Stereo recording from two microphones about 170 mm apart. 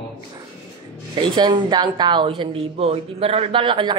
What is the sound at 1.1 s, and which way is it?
A woman's voice, 25° right (ahead or behind).